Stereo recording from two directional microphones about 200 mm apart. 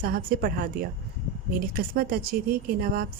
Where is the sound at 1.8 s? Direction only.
45° right (ahead or behind).